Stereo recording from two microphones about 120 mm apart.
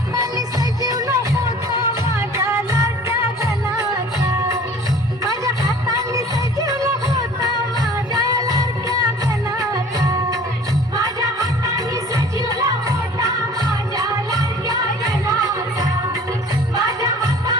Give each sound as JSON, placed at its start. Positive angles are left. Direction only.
{"t": 0.1, "sound": "music", "side_deg": -30}
{"t": 6.1, "sound": "music", "side_deg": -30}